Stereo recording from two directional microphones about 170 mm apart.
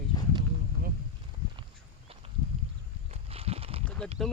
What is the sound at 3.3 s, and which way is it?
Horse, 35° right (ahead or behind).